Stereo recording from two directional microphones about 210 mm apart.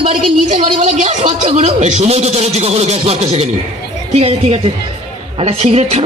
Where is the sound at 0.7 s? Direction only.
35° right (ahead or behind).